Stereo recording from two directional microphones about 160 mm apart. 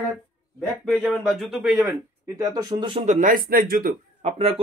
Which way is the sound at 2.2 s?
20° right (ahead or behind).